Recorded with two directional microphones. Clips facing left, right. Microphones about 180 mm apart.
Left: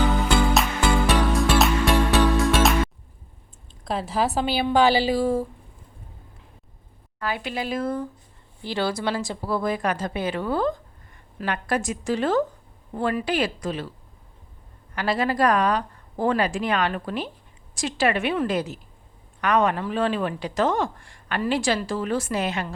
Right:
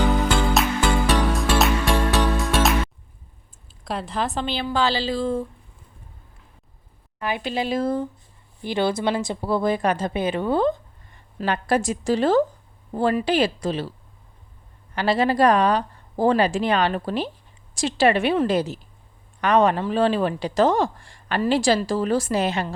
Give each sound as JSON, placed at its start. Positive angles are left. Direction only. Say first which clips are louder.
{"t": 1.3, "sound": "music", "louder": "left 1 dB", "side_deg": 0}
{"t": 3.8, "sound": "speech", "louder": "left 2 dB", "side_deg": 5}
{"t": 7.2, "sound": "a woman's voice", "louder": "right 3 dB", "side_deg": -20}
{"t": 14.9, "sound": "speech", "louder": "right 3 dB", "side_deg": -30}